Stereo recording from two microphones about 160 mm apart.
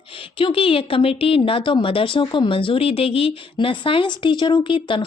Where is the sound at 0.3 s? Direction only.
35° left (ahead or behind).